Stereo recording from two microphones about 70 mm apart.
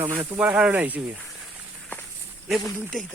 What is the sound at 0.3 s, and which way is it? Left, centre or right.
Speech, right.